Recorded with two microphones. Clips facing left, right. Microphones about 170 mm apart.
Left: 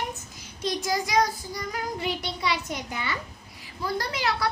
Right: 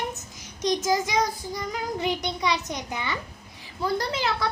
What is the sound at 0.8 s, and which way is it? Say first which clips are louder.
A child's voice: left 3 dB; 20° right (ahead or behind).